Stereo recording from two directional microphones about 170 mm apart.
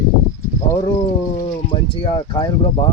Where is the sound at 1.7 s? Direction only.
30° left (ahead or behind).